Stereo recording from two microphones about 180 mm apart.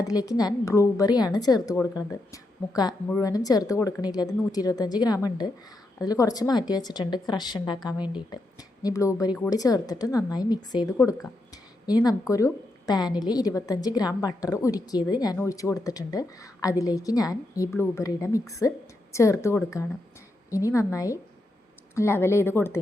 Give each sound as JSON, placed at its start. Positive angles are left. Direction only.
{"t": 0.0, "sound": "a woman's voice", "side_deg": 20}